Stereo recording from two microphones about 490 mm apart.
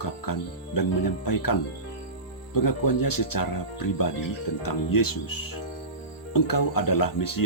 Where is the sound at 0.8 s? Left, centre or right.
Left.